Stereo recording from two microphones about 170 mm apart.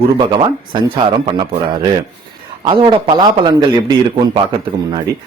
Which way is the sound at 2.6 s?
30° right (ahead or behind).